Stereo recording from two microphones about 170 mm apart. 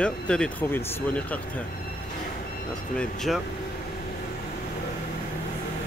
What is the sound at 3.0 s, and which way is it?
Speech, centre (ahead or behind).